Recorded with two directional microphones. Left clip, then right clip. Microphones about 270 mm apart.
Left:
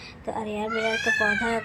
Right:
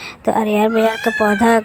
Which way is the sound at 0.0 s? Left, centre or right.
Right.